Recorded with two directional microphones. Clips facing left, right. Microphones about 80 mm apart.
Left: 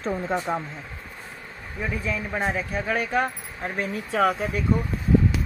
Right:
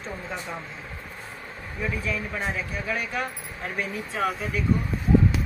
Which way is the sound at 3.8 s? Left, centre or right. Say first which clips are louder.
Left 6 dB; left.